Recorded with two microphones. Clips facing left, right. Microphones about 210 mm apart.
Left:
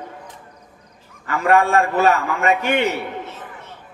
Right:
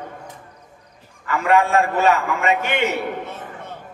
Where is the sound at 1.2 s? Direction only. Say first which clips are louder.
Left 1 dB; 40° left (ahead or behind).